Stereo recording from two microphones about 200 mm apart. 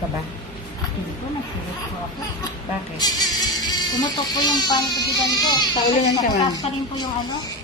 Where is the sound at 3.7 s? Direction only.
20° left (ahead or behind).